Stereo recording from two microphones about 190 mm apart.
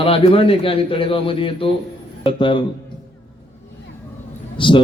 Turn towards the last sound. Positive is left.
turn(degrees=25)  # may be behind; listen again after turning